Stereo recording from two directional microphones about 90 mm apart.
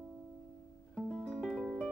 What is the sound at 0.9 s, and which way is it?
Music, 5° left (ahead or behind).